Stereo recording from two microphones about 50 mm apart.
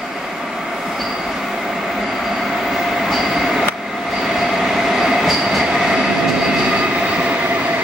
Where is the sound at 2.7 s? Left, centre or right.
Centre.